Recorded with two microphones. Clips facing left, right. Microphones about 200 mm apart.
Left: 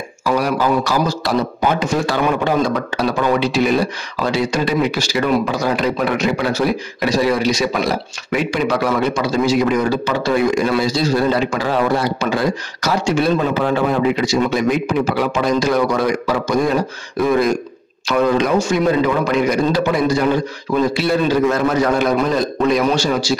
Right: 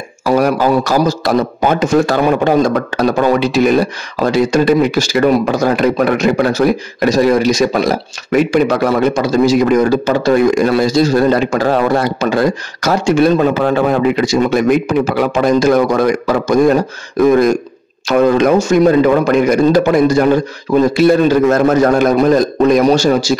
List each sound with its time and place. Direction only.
0.2 s a man's voice: 45° right (ahead or behind)